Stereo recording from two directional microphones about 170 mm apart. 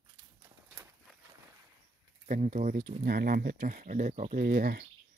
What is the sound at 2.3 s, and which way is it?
Speech, 50° right (ahead or behind).